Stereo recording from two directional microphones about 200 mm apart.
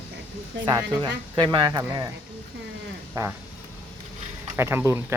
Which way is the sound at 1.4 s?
20° right (ahead or behind).